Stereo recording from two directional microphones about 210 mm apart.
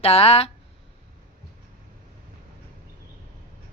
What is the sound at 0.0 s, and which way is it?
Speech, 30° left (ahead or behind).